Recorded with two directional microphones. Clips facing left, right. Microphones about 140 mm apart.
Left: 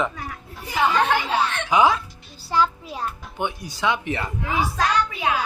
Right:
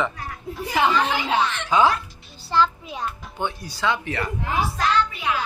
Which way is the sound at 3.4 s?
15° left (ahead or behind).